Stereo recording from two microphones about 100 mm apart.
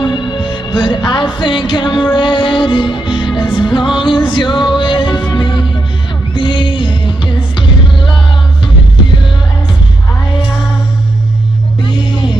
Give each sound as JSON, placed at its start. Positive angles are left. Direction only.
{"t": 0.0, "sound": "music", "side_deg": 50}